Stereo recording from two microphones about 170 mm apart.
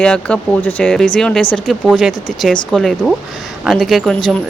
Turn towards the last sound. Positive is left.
turn(degrees=0)  # may be behind; listen again after turning